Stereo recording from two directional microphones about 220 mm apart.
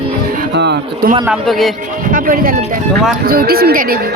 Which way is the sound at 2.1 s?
40° right (ahead or behind).